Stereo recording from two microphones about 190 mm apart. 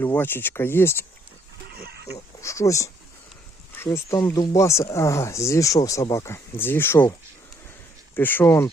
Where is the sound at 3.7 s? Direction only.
15° left (ahead or behind).